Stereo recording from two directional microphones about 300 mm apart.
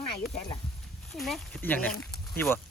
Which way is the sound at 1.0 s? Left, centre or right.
Centre.